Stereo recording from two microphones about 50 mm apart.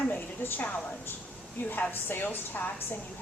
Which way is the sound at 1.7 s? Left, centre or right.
Left.